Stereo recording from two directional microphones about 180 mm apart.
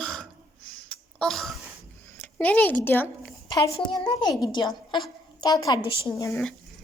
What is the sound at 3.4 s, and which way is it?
A woman's voice, 25° left (ahead or behind).